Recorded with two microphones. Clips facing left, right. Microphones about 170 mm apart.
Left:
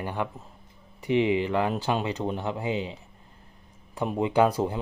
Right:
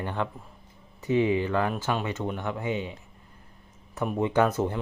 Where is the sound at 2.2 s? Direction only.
30° left (ahead or behind).